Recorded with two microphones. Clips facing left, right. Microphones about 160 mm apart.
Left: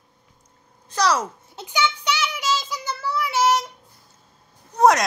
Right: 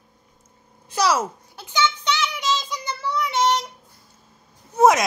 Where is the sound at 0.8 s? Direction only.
5° right (ahead or behind).